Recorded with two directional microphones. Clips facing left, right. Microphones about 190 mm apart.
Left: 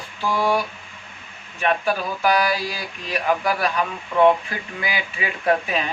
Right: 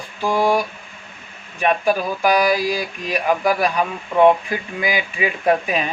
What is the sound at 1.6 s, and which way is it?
Speech, 15° right (ahead or behind).